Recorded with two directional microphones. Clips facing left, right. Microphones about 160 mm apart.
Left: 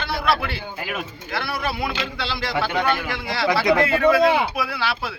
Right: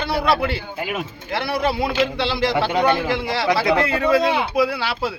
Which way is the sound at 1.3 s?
20° right (ahead or behind).